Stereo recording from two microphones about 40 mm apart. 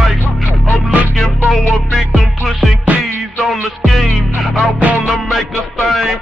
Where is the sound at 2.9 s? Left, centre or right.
Right.